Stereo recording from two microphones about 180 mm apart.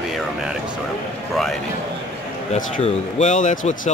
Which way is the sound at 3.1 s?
40° left (ahead or behind).